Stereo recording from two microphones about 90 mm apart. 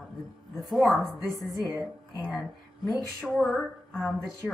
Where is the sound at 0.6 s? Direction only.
Centre (ahead or behind).